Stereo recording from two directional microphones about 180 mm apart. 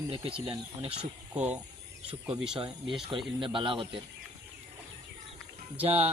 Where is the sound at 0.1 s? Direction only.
30° right (ahead or behind).